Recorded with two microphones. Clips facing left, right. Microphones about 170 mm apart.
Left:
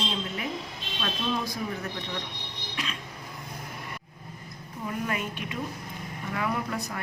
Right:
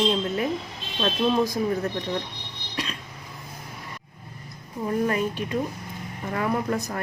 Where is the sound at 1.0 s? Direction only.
40° right (ahead or behind).